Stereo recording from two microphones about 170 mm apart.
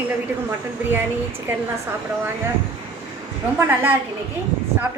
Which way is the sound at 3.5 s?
15° right (ahead or behind).